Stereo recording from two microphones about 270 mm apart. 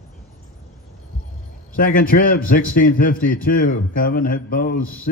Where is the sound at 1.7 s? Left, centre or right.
Left.